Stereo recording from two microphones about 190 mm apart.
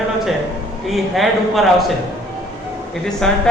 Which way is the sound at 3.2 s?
5° left (ahead or behind).